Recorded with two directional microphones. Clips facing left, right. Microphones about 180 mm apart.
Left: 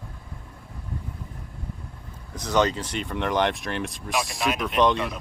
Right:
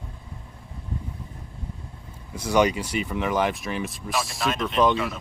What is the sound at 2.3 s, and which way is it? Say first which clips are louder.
Speech: right 2 dB; 10° right (ahead or behind).